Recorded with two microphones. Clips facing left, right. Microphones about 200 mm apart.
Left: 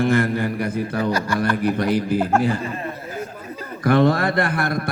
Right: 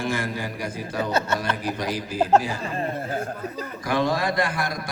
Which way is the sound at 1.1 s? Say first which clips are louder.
Left 1 dB; 25° right (ahead or behind).